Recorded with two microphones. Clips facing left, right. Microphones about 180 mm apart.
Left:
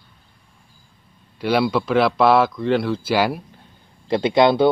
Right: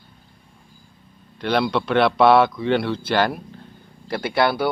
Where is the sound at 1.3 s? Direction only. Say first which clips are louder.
Left 2 dB; 5° left (ahead or behind).